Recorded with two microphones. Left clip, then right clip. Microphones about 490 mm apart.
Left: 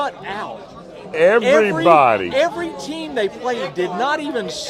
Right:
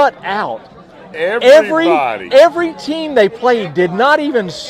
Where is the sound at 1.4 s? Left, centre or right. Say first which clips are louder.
Right 7 dB; right.